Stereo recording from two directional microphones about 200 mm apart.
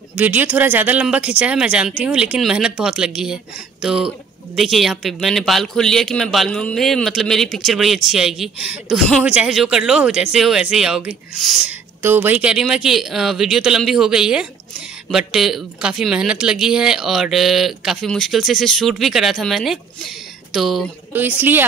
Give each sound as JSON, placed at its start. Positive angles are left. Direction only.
{"t": 0.2, "sound": "speech", "side_deg": -10}